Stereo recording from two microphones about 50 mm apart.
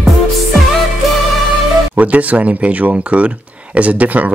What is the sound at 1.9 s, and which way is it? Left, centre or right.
Speech, right.